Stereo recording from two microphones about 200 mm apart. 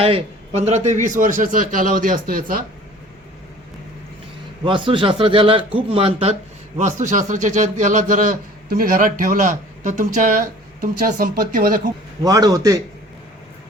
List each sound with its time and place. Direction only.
0.0 s a man's voice: 30° right (ahead or behind); by 2.6 s 45° right (ahead or behind)
4.6 s a man's voice: 25° right (ahead or behind); by 11.8 s 45° right (ahead or behind)
12.2 s a man's voice: 15° right (ahead or behind)